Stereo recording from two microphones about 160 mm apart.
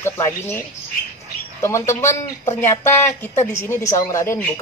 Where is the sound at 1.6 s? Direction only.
15° left (ahead or behind).